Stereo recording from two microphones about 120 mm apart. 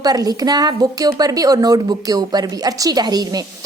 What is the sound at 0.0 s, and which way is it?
A woman's voice, 30° right (ahead or behind).